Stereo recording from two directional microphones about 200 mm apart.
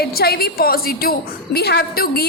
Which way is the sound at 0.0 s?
50° left (ahead or behind).